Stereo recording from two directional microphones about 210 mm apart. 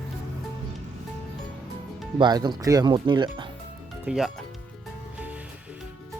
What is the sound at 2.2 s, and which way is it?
Speech, 20° right (ahead or behind).